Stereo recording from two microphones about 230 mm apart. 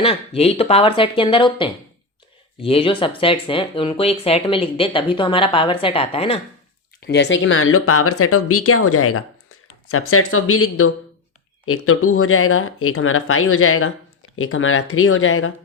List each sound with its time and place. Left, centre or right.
0.0 s speech: left
7.0 s speech: left